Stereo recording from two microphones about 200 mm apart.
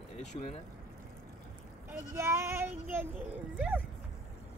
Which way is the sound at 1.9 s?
15° right (ahead or behind).